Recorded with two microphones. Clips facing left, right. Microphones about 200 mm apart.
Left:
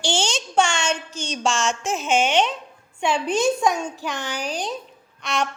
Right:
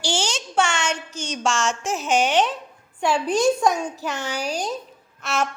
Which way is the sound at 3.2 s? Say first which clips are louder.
Right 2 dB; 40° right (ahead or behind).